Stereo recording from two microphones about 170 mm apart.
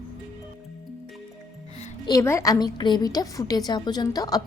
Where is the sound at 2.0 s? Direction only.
20° left (ahead or behind).